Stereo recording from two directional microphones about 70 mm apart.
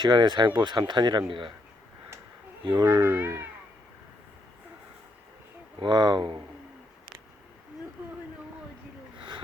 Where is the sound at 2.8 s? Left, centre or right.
Right.